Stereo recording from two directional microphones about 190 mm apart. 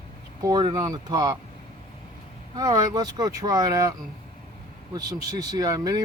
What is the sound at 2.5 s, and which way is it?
Speech, 20° right (ahead or behind).